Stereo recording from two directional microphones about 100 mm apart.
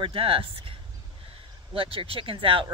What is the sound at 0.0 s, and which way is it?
Speech, 65° right (ahead or behind).